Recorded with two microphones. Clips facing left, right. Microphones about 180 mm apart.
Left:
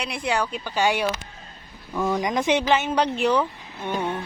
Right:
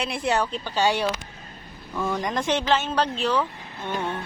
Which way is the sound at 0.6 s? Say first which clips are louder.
Even; 10° left (ahead or behind).